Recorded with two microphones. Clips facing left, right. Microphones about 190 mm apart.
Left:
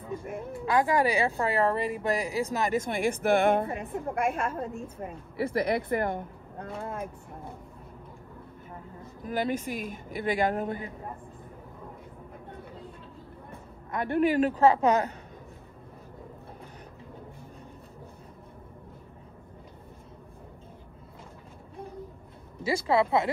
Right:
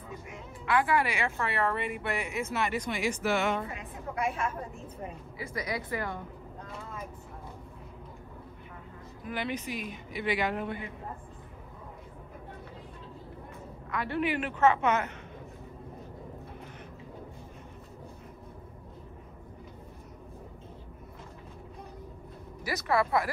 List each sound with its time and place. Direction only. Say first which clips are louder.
0.2 s music: left 9 dB; 55° left (ahead or behind)
0.7 s speech: left 3 dB; 35° left (ahead or behind)
5.4 s speech: left 9 dB; 60° left (ahead or behind)
9.3 s speech: left 5 dB; 45° left (ahead or behind)
13.8 s speech: left 5 dB; 50° left (ahead or behind)
22.6 s speech: left 4 dB; 25° left (ahead or behind)